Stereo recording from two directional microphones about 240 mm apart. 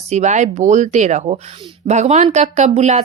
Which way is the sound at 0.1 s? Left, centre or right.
Right.